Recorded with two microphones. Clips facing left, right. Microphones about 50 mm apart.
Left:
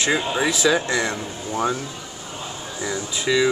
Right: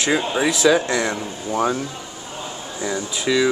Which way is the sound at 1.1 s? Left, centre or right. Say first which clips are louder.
Right 3 dB; centre.